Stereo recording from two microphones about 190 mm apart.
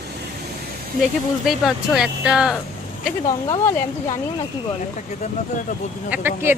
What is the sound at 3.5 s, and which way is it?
Speech, 15° left (ahead or behind).